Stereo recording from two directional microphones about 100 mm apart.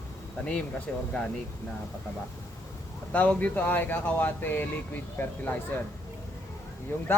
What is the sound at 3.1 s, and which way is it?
Speech, 15° left (ahead or behind).